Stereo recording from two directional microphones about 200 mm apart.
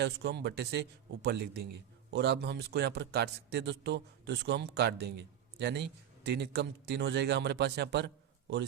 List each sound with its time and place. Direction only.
0.0 s a man's voice: 60° right (ahead or behind)